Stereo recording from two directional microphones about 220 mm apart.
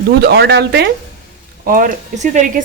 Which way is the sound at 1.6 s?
40° right (ahead or behind).